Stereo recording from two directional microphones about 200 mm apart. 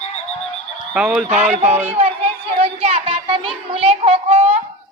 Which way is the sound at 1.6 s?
10° right (ahead or behind).